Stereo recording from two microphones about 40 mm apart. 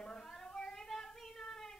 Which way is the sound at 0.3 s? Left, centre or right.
Centre.